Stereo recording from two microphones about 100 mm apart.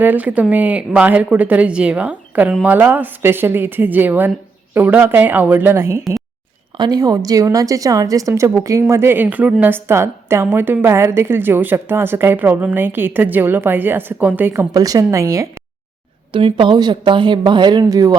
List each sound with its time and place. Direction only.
0.0 s a woman's voice: 15° right (ahead or behind)
6.7 s a woman's voice: 40° right (ahead or behind); by 14.7 s 20° right (ahead or behind)
14.7 s a woman's voice: 40° right (ahead or behind)
16.3 s a woman's voice: 60° right (ahead or behind)
16.7 s speech: 45° right (ahead or behind)
17.8 s a woman's voice: 35° right (ahead or behind)